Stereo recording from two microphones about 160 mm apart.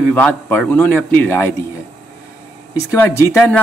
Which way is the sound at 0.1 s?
10° left (ahead or behind).